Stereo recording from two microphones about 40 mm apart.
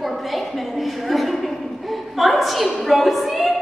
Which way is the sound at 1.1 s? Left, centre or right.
Centre.